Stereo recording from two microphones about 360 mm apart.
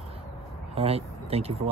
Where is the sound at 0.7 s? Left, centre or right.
Centre.